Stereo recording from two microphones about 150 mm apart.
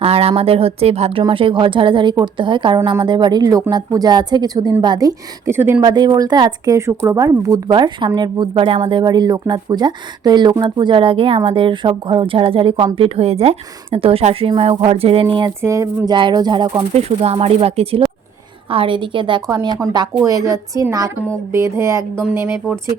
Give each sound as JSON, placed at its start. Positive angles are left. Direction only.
{"t": 0.0, "sound": "a woman's voice", "side_deg": -40}
{"t": 5.8, "sound": "a woman's voice", "side_deg": -30}
{"t": 7.7, "sound": "speech", "side_deg": -30}
{"t": 15.6, "sound": "a woman's voice", "side_deg": -20}
{"t": 17.0, "sound": "a woman's voice", "side_deg": -45}